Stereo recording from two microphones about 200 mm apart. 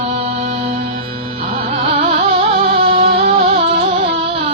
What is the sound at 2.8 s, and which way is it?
Music, 30° right (ahead or behind).